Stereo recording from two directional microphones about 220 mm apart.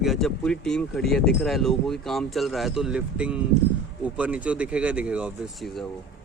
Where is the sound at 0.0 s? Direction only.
Centre (ahead or behind).